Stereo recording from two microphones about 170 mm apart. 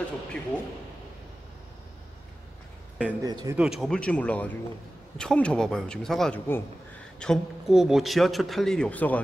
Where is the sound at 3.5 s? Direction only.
5° right (ahead or behind).